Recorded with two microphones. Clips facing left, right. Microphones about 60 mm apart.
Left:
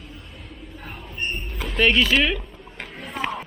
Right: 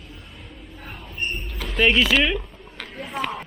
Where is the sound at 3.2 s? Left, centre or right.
Centre.